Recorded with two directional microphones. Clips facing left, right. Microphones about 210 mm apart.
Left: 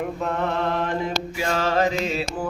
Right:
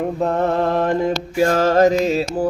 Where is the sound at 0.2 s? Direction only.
35° right (ahead or behind).